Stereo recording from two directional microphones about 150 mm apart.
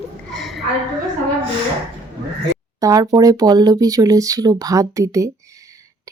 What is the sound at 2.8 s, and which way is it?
Speech, 20° right (ahead or behind).